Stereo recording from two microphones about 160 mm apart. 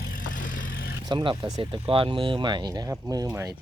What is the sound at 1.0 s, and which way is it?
Speech, 25° right (ahead or behind).